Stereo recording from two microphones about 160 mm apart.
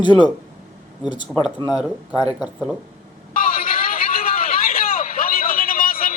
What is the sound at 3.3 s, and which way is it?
Vehicle, 60° left (ahead or behind).